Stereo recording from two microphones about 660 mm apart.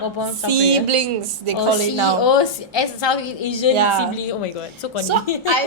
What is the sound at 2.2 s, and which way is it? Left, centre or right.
A woman's voice, left.